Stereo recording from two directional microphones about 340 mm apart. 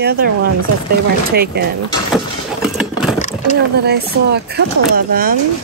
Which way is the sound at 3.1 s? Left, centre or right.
Left.